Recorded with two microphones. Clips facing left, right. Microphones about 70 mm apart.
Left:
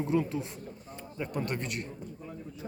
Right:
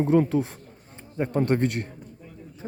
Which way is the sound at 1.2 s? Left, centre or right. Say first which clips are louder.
Right 11 dB; right.